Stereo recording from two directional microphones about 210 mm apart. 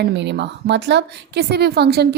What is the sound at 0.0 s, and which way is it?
A woman's voice, 55° right (ahead or behind).